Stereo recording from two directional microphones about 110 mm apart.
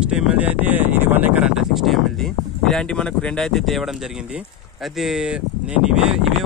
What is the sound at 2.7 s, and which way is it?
Speech, 10° left (ahead or behind).